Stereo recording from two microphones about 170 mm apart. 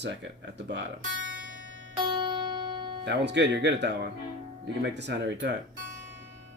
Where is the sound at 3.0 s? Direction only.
85° right.